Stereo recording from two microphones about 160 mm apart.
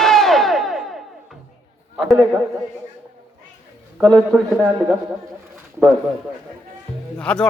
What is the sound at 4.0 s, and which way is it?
Speech, 5° left (ahead or behind).